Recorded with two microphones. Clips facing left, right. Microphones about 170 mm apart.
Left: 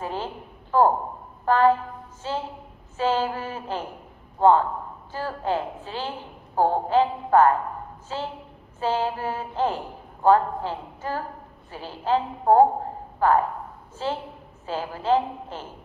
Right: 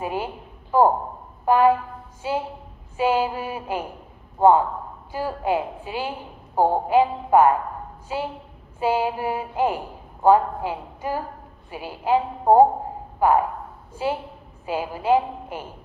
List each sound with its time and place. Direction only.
0.0 s a woman's voice: 10° right (ahead or behind)
1.4 s brass instrument: 10° right (ahead or behind)
2.2 s a woman's voice: 10° right (ahead or behind)